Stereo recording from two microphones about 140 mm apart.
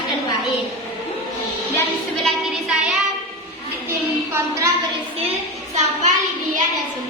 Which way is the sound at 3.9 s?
20° right (ahead or behind).